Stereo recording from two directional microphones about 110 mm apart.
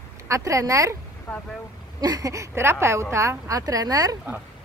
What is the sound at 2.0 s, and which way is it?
Speech, 35° right (ahead or behind).